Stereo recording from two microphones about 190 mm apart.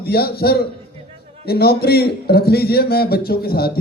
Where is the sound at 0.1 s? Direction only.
55° left (ahead or behind).